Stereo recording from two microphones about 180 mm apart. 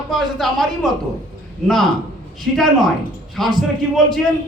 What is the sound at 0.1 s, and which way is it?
Speech, centre (ahead or behind).